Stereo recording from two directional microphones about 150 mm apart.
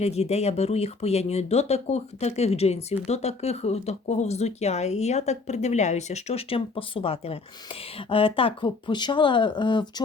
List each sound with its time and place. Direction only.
0.0 s speech: 45° left (ahead or behind); by 10.0 s 30° left (ahead or behind)